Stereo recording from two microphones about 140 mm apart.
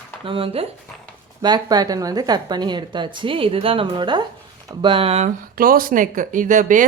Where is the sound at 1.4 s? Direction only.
30° right (ahead or behind); by 5.3 s 45° right (ahead or behind).